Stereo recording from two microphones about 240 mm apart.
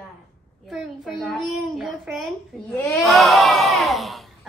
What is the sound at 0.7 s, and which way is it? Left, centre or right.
Speech, centre.